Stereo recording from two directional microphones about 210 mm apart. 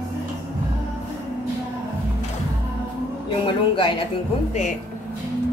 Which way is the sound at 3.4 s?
25° left (ahead or behind).